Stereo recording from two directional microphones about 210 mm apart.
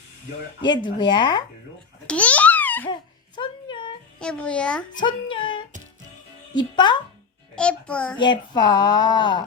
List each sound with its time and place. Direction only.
0.6 s speech: 20° left (ahead or behind)
2.0 s babbling: 5° left (ahead or behind)
2.9 s a sound: 20° left (ahead or behind)
4.2 s a child's voice: 5° left (ahead or behind)
4.9 s speech: 20° left (ahead or behind)
7.5 s a child's voice: 5° left (ahead or behind)
8.2 s speech: 20° left (ahead or behind)